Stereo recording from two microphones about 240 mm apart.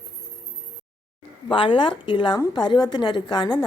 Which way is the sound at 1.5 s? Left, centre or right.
Left.